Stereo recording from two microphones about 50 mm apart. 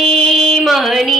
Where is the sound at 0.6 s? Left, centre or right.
Centre.